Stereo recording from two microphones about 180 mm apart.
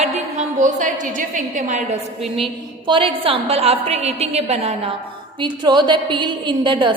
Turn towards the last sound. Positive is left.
turn(degrees=-25)  # may be behind; listen again after turning